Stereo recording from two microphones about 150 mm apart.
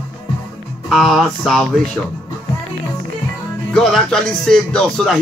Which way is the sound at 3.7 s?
5° left (ahead or behind).